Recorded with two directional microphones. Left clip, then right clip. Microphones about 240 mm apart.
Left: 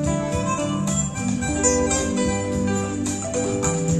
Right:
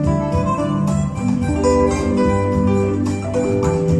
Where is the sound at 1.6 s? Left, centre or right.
Centre.